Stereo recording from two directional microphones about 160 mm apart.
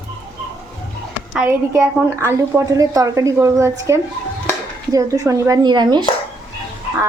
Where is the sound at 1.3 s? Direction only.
15° right (ahead or behind).